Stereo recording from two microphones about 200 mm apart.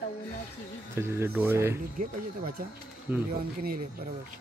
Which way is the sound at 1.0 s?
10° right (ahead or behind).